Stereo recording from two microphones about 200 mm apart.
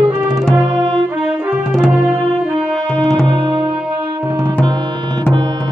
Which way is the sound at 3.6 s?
5° right (ahead or behind).